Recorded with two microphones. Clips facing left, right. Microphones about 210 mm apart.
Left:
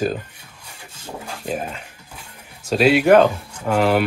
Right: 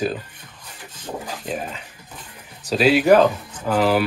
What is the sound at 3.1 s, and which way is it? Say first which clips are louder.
Speech: left 1 dB; 10° left (ahead or behind).